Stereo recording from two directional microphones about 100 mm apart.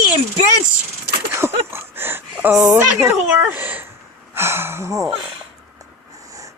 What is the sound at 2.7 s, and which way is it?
A child's voice, 25° right (ahead or behind).